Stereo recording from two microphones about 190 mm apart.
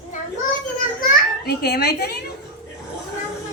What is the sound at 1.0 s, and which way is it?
Children playing, 60° left (ahead or behind).